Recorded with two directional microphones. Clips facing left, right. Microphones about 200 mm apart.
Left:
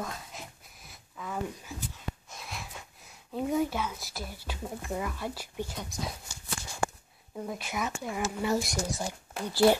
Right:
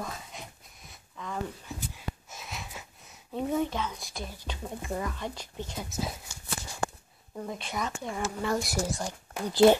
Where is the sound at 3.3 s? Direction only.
Centre (ahead or behind).